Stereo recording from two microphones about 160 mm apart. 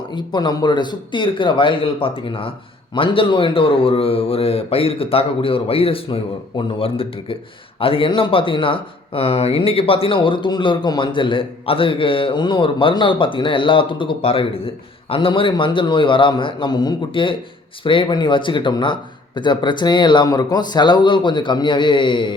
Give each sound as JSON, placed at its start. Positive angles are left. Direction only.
{"t": 0.1, "sound": "speech", "side_deg": 30}